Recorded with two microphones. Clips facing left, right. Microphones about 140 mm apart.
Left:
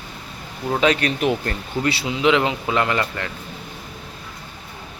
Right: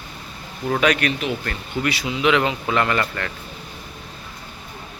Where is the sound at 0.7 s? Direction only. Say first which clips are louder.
Left 1 dB; 25° left (ahead or behind).